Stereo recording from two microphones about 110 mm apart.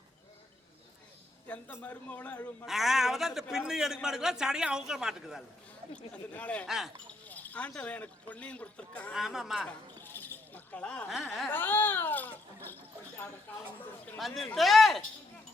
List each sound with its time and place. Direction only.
1.5 s a man's voice: 15° left (ahead or behind)
2.6 s a man's voice: 5° right (ahead or behind)
6.3 s a man's voice: 15° left (ahead or behind)
6.7 s a man's voice: 5° right (ahead or behind)
7.3 s speech: 15° left (ahead or behind)
9.1 s a man's voice: 5° right (ahead or behind)
9.6 s a sound: 20° left (ahead or behind)
11.1 s a man's voice: centre (ahead or behind)
11.5 s a man's voice: 15° left (ahead or behind)
14.2 s a man's voice: centre (ahead or behind)